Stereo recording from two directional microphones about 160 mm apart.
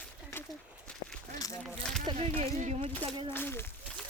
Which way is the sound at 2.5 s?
50° right (ahead or behind).